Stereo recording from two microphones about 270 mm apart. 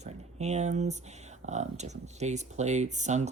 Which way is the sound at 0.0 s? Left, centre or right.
Right.